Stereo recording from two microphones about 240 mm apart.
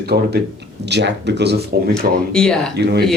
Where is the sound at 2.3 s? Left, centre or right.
Centre.